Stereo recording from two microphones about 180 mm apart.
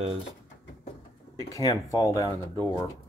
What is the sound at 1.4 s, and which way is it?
Speech, 20° left (ahead or behind).